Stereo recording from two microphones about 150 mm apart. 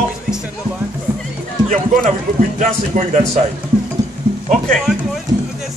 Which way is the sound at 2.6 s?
50° right (ahead or behind).